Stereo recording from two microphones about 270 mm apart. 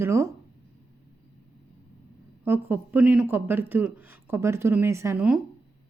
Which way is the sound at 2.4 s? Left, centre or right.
Centre.